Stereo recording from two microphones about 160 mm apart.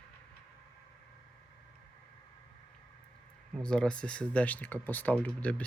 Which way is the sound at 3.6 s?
5° left (ahead or behind).